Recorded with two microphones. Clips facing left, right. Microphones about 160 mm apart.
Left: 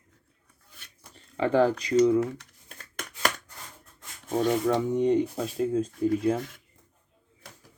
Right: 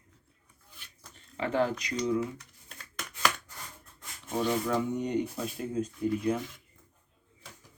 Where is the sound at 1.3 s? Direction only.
35° left (ahead or behind).